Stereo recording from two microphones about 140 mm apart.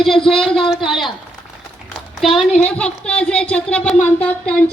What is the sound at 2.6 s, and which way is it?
Speech, 10° left (ahead or behind).